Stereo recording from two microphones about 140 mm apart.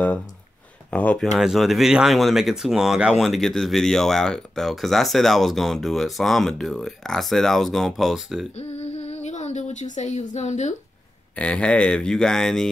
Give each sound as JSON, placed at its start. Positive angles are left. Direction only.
{"t": 0.9, "sound": "speech", "side_deg": 10}
{"t": 8.5, "sound": "speech", "side_deg": 50}
{"t": 11.3, "sound": "speech", "side_deg": 10}